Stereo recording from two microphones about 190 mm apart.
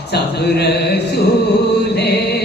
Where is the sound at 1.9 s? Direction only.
60° left (ahead or behind).